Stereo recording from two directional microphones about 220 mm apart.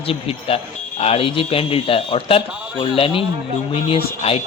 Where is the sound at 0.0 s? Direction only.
25° left (ahead or behind).